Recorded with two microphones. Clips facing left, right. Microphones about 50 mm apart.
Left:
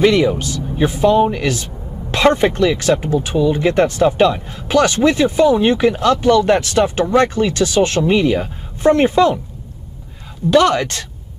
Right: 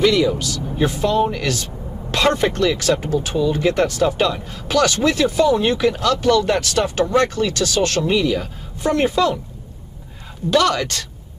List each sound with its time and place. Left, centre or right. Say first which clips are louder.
0.0 s speech: left 3 dB; left
0.7 s speech: left 5 dB; centre
10.5 s speech: left 4 dB; left